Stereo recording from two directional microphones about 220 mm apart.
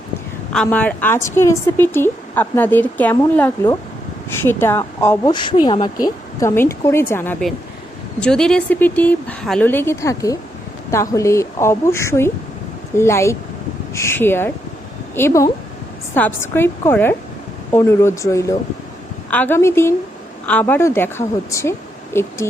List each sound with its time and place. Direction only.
0.5 s speech: 5° left (ahead or behind)